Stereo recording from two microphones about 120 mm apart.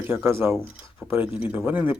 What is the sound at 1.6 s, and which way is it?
Speech, 15° right (ahead or behind).